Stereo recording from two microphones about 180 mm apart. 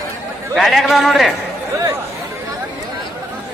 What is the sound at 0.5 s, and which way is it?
Speech, centre (ahead or behind).